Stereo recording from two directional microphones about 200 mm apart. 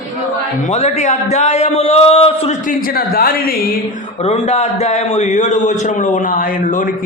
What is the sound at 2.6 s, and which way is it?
Speech, 45° left (ahead or behind).